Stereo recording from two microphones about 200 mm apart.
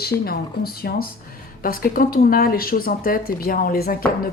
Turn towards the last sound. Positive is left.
turn(degrees=45)  # may be behind; listen again after turning